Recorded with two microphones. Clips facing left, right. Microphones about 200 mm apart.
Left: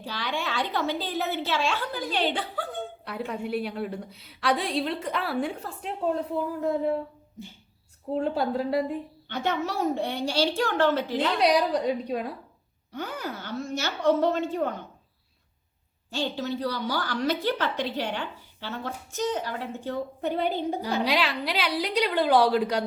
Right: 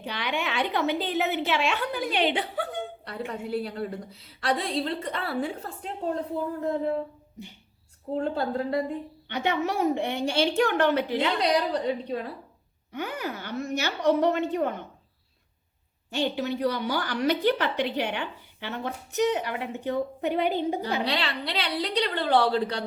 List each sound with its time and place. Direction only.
0.0 s a woman's voice: 20° right (ahead or behind)
3.1 s a woman's voice: centre (ahead or behind)
8.1 s a woman's voice: 10° left (ahead or behind)
9.3 s a woman's voice: 15° right (ahead or behind)
11.3 s a woman's voice: 10° left (ahead or behind)
13.0 s a woman's voice: 15° right (ahead or behind)
16.1 s a woman's voice: 20° right (ahead or behind)
21.0 s a woman's voice: 10° left (ahead or behind)